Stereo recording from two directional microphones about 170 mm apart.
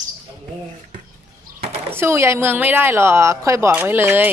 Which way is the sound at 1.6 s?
35° right (ahead or behind).